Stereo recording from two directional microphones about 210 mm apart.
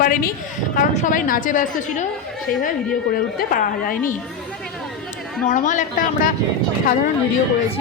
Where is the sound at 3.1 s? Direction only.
45° left (ahead or behind).